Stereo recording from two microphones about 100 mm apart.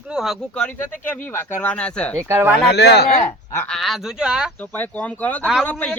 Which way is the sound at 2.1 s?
25° right (ahead or behind).